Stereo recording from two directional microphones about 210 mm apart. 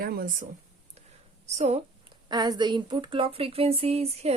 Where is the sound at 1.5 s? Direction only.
30° right (ahead or behind).